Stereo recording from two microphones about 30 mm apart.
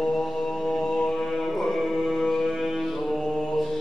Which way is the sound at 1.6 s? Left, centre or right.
Centre.